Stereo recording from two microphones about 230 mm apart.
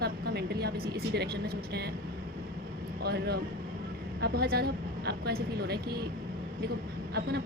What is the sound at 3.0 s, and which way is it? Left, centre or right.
A woman's voice, right.